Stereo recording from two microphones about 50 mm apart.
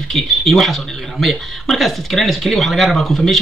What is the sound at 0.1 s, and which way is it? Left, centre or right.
A man's voice, centre.